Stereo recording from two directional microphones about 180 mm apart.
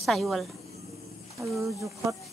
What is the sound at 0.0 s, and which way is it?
Speech, centre (ahead or behind).